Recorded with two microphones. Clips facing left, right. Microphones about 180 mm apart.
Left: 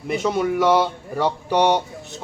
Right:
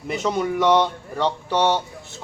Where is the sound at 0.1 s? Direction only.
Centre (ahead or behind).